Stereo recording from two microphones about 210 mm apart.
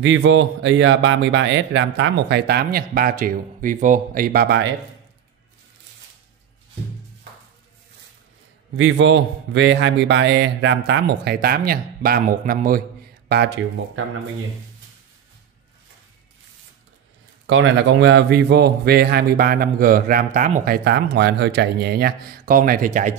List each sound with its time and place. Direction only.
0.0 s speech: 65° right (ahead or behind)
8.7 s speech: 60° right (ahead or behind); by 12.8 s 45° right (ahead or behind)
17.5 s a man's voice: 60° right (ahead or behind); by 23.1 s 40° right (ahead or behind)